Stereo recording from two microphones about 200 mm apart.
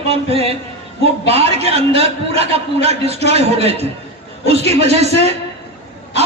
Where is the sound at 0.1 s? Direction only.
30° right (ahead or behind).